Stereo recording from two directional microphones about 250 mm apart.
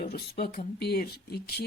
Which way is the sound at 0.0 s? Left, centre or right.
Left.